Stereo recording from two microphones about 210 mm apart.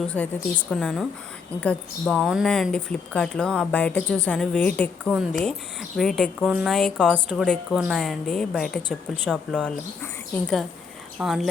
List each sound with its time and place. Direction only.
0.1 s a woman's voice: 5° left (ahead or behind)
11.2 s a woman's voice: 5° right (ahead or behind)